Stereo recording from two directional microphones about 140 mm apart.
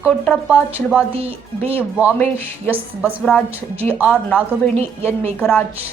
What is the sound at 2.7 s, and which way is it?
A woman's voice, 15° right (ahead or behind).